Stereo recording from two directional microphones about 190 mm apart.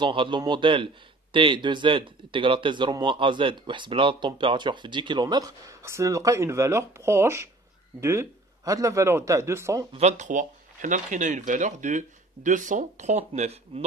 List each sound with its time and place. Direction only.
0.0 s a man's voice: 25° right (ahead or behind)
9.9 s speech: 35° right (ahead or behind)